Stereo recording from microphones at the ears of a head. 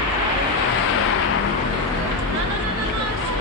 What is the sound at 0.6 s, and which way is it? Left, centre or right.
Vehicle, left.